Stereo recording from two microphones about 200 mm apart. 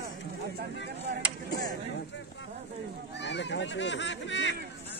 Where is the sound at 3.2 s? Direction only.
60° left (ahead or behind).